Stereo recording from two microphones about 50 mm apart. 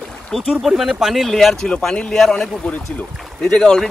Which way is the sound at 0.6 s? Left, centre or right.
Centre.